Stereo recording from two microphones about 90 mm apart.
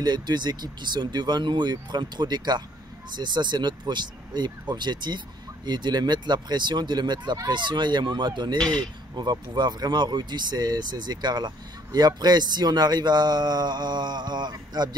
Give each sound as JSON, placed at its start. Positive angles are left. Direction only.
{"t": 0.0, "sound": "speech", "side_deg": -55}
{"t": 8.5, "sound": "speech", "side_deg": 10}
{"t": 9.1, "sound": "speech", "side_deg": -55}